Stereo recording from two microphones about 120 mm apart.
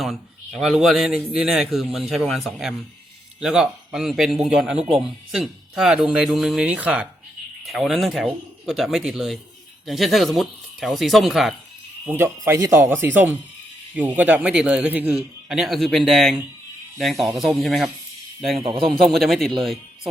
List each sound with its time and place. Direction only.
0.0 s a man's voice: centre (ahead or behind)
4.8 s speech: 60° right (ahead or behind)
5.0 s a man's voice: centre (ahead or behind)
7.6 s a man's voice: centre (ahead or behind)
12.0 s speech: 20° right (ahead or behind)
15.1 s a man's voice: centre (ahead or behind)
18.5 s a man's voice: 50° right (ahead or behind)
18.9 s a man's voice: centre (ahead or behind)